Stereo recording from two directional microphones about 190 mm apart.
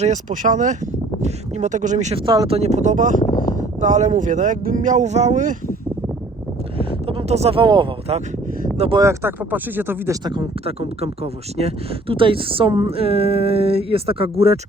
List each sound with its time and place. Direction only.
0.0 s speech: 40° right (ahead or behind)
2.2 s speech: 25° right (ahead or behind)
2.6 s speech: 35° right (ahead or behind)
6.7 s speech: 30° right (ahead or behind)
8.9 s speech: 15° right (ahead or behind)
10.2 s speech: 25° right (ahead or behind)